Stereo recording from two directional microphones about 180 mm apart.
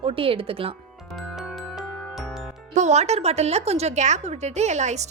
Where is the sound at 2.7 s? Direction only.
40° right (ahead or behind).